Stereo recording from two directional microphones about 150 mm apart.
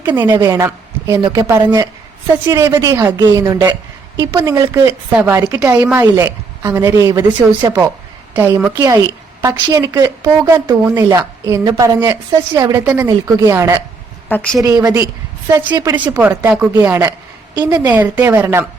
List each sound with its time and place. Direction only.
0.3 s a woman's voice: 20° right (ahead or behind)
8.3 s a woman's voice: 15° right (ahead or behind)
14.3 s a woman's voice: 10° left (ahead or behind)
14.6 s a woman's voice: 25° right (ahead or behind)
16.1 s a woman's voice: 15° right (ahead or behind)
17.8 s speech: 10° right (ahead or behind)